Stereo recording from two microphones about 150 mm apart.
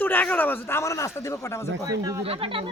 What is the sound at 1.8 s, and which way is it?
Speech, 25° right (ahead or behind).